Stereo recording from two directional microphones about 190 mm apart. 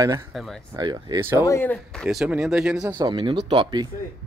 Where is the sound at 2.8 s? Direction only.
20° right (ahead or behind).